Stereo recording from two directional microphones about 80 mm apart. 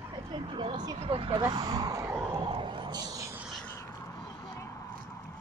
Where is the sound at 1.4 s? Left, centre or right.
Right.